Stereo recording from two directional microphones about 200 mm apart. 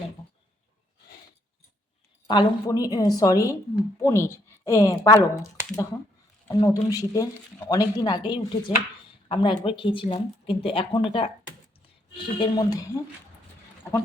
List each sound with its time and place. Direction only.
2.2 s a woman's voice: 20° left (ahead or behind)
6.5 s a woman's voice: 15° left (ahead or behind)